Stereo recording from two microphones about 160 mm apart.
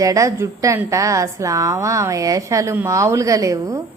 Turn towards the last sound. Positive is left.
turn(degrees=-20)  # may be behind; listen again after turning